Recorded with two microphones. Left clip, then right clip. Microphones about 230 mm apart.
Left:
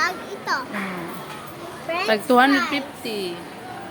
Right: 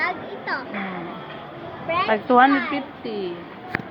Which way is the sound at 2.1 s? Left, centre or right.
Left.